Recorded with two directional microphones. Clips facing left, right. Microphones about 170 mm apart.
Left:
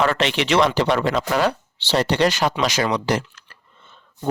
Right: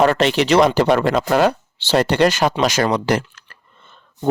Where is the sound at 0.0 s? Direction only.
40° right (ahead or behind).